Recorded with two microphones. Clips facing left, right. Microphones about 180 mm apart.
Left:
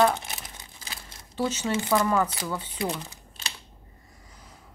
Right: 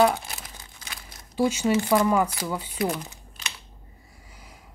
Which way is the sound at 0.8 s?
30° left (ahead or behind).